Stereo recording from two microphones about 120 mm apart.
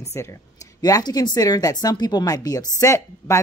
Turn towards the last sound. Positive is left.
turn(degrees=25)  # may be behind; listen again after turning